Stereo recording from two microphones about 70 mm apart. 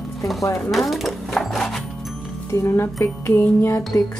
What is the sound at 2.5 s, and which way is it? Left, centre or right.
Speech, left.